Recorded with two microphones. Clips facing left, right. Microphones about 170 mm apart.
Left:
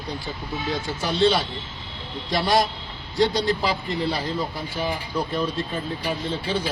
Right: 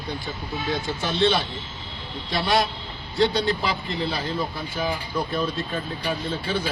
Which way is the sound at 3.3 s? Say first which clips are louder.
Left 1 dB; 35° left (ahead or behind).